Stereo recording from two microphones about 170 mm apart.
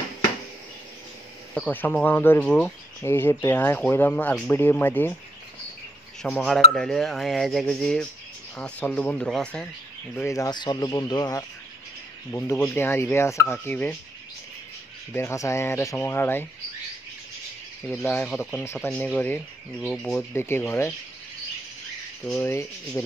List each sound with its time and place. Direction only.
1.5 s speech: 10° left (ahead or behind)
6.2 s speech: 5° left (ahead or behind)
10.2 s speech: 20° left (ahead or behind)
15.1 s speech: 15° left (ahead or behind)
18.0 s speech: 10° left (ahead or behind)
18.6 s speech: 15° left (ahead or behind)
19.8 s speech: centre (ahead or behind)
20.3 s speech: 15° left (ahead or behind)
22.2 s speech: 10° left (ahead or behind)